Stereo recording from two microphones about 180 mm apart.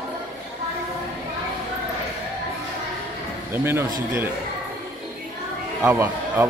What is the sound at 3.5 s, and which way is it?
Speech, 15° right (ahead or behind).